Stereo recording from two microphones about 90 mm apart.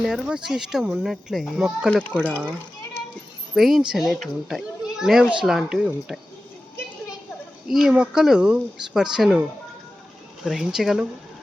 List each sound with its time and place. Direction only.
0.0 s a child's voice: 10° right (ahead or behind)
2.0 s speech: 15° left (ahead or behind)
2.3 s a child's voice: 15° right (ahead or behind)
7.7 s speech: 5° right (ahead or behind)
10.4 s a child's voice: 5° right (ahead or behind)